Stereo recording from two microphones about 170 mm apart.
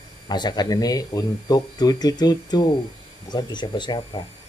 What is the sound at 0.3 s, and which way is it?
Speech, 25° left (ahead or behind).